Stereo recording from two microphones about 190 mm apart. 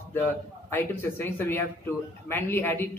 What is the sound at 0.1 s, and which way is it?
A man's voice, 10° left (ahead or behind).